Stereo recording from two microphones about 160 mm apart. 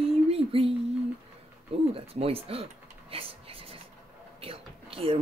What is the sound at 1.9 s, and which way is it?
Speech, 35° right (ahead or behind).